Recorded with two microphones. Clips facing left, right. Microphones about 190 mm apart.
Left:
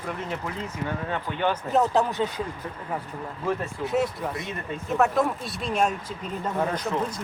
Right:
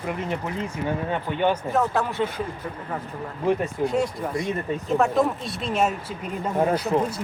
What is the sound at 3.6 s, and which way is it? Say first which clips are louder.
Speech: right 2 dB; centre (ahead or behind).